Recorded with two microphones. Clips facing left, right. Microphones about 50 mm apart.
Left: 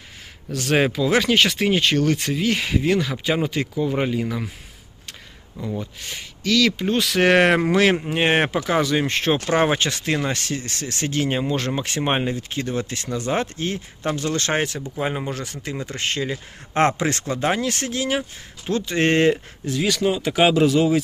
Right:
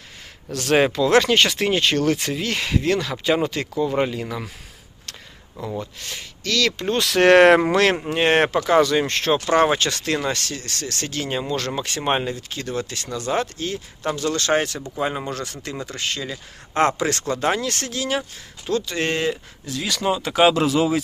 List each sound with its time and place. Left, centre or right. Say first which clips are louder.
0.5 s speech: right 2 dB; centre
5.6 s speech: even; centre
15.9 s speech: left 5 dB; left
19.9 s speech: right 1 dB; centre